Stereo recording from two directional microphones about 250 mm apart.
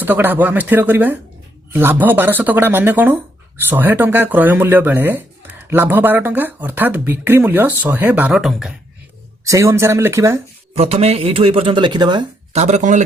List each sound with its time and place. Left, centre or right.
0.0 s speech: centre
9.4 s speech: centre
10.8 s speech: right